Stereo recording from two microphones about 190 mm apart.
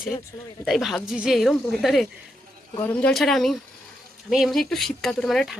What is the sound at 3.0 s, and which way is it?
Speech, centre (ahead or behind).